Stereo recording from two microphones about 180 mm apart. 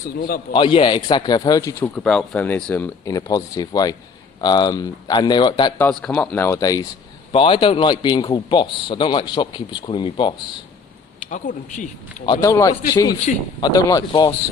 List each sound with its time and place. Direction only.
0.2 s a man's voice: 55° left (ahead or behind)
0.5 s a man's voice: 30° left (ahead or behind)
1.8 s a man's voice: 5° left (ahead or behind); by 5.7 s 25° left (ahead or behind)
5.7 s a man's voice: 5° left (ahead or behind); by 10.3 s 25° left (ahead or behind)
11.3 s speech: 45° left (ahead or behind)
12.2 s a man's voice: 20° left (ahead or behind)